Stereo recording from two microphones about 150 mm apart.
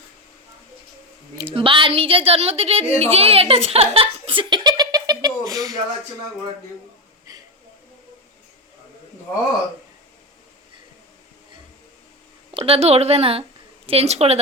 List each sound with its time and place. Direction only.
1.5 s a woman's voice: 35° right (ahead or behind)
7.3 s a sound: 25° right (ahead or behind)
12.5 s a woman's voice: 40° right (ahead or behind)